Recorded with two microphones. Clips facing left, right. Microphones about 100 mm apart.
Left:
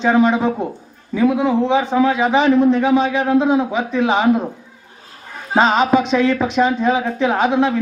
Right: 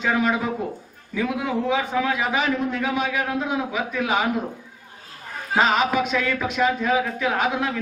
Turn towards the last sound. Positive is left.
turn(degrees=30)  # may be behind; listen again after turning